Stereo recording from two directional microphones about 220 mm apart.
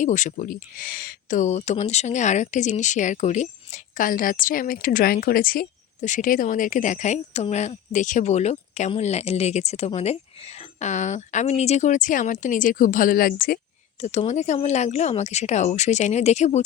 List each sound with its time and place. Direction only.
0.0 s speech: 35° left (ahead or behind)
14.0 s speech: 30° left (ahead or behind)